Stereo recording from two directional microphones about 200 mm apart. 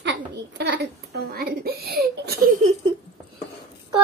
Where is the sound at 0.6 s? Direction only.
55° right (ahead or behind).